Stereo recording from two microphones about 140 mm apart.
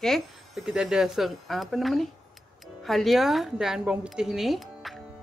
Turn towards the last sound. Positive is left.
turn(degrees=0)  # may be behind; listen again after turning